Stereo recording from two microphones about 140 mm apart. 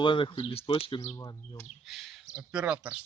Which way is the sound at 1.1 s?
25° left (ahead or behind).